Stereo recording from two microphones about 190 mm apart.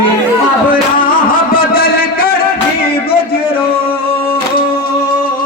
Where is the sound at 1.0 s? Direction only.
50° left (ahead or behind).